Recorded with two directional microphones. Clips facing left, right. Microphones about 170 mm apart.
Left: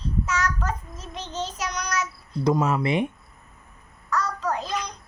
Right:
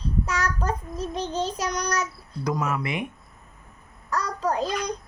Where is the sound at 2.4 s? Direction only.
25° left (ahead or behind).